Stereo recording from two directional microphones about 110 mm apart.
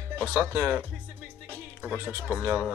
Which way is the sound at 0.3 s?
10° right (ahead or behind).